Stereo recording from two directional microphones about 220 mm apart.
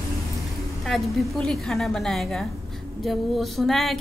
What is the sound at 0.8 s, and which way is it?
Speech, centre (ahead or behind).